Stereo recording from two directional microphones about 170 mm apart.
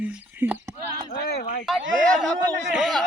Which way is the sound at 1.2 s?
70° left (ahead or behind).